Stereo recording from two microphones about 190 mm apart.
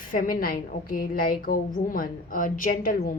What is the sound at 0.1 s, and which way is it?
A woman's voice, 45° left (ahead or behind).